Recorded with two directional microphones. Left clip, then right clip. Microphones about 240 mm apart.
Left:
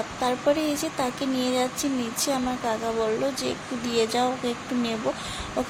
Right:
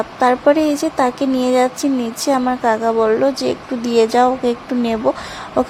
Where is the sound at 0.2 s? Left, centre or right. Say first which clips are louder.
Right 11 dB; right.